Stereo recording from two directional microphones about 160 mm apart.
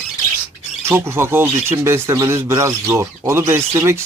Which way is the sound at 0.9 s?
15° right (ahead or behind).